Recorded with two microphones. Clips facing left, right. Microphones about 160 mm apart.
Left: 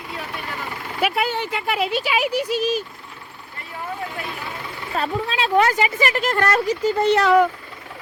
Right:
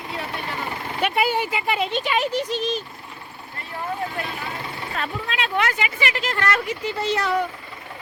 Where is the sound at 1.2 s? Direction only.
10° right (ahead or behind); by 2.8 s 10° left (ahead or behind).